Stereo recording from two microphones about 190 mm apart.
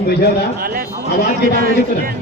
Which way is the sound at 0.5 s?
50° right (ahead or behind).